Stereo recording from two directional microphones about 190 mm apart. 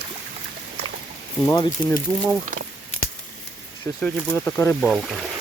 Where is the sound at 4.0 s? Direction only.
5° left (ahead or behind).